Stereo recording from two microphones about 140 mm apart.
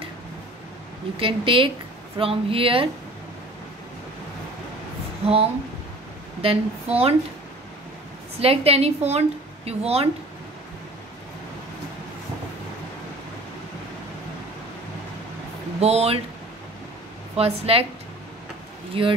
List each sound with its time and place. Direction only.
1.1 s speech: 40° right (ahead or behind)
5.2 s a woman's voice: 45° right (ahead or behind)
8.4 s a woman's voice: 45° right (ahead or behind)
15.8 s a woman's voice: 45° right (ahead or behind)
17.4 s a woman's voice: 45° right (ahead or behind)
18.9 s speech: 40° right (ahead or behind)